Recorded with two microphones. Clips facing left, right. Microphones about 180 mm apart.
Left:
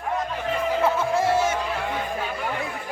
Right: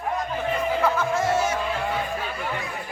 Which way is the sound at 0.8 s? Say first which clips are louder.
Left 3 dB; 30° left (ahead or behind).